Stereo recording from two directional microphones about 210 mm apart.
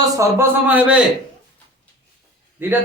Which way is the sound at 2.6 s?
10° right (ahead or behind).